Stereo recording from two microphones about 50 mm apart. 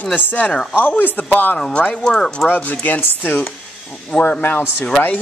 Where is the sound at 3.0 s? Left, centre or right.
Left.